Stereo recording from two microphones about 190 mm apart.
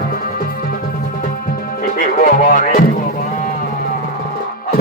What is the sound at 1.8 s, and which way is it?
Speech, 45° left (ahead or behind).